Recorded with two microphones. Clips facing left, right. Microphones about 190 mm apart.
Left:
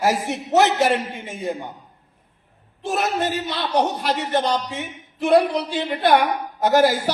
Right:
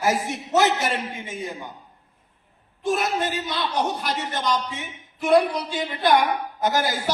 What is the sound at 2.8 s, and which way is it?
A man's voice, 60° left (ahead or behind).